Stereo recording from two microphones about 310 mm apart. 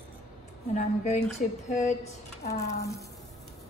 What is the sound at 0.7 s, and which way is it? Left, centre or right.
A woman's voice, left.